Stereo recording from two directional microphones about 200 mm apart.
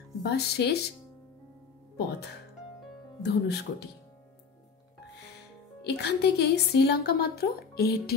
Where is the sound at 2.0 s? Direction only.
55° left (ahead or behind).